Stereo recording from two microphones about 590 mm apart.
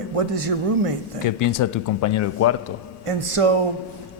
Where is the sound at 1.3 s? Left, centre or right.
Left.